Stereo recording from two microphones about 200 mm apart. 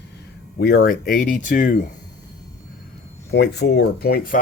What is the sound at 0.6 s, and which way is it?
Speech, 50° left (ahead or behind).